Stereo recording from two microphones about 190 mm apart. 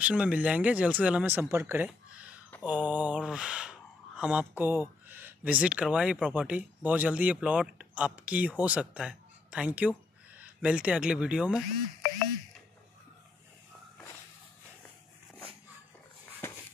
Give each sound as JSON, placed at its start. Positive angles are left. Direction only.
{"t": 0.0, "sound": "speech", "side_deg": -5}
{"t": 2.6, "sound": "mantra", "side_deg": -10}
{"t": 4.2, "sound": "speech", "side_deg": -5}